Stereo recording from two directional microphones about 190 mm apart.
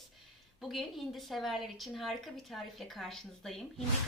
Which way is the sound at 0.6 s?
Centre (ahead or behind).